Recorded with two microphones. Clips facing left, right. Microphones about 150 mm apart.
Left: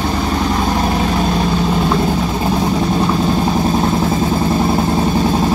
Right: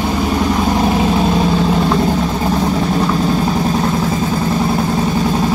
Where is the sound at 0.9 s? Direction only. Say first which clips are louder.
Right 2 dB; 5° right (ahead or behind).